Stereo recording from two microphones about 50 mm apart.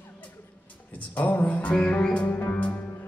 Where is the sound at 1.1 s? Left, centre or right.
Left.